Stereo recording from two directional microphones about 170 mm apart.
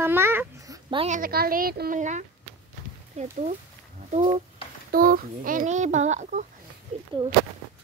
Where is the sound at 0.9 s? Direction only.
45° right (ahead or behind); by 2.0 s 60° right (ahead or behind).